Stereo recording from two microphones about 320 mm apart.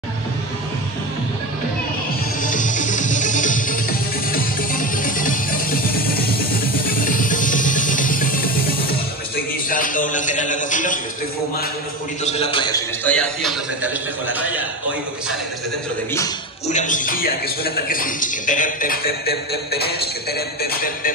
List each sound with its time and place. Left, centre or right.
2.4 s music: left
9.7 s a sound: left
12.3 s a man's voice: centre
16.6 s a man's voice: left